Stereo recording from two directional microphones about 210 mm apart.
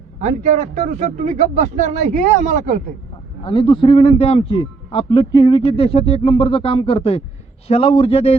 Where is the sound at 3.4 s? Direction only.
25° left (ahead or behind).